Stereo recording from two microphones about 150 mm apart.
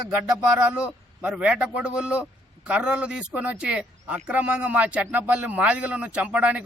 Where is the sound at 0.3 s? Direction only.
5° right (ahead or behind).